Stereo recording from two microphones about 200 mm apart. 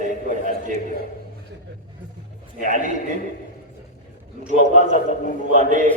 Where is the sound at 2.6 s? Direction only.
40° right (ahead or behind).